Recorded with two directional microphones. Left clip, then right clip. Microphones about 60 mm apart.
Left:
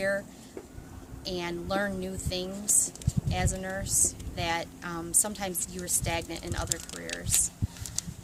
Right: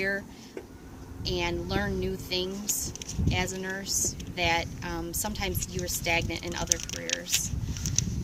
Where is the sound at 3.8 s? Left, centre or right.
Left.